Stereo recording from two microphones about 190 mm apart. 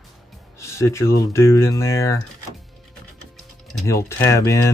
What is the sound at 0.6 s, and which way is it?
Speech, 15° left (ahead or behind).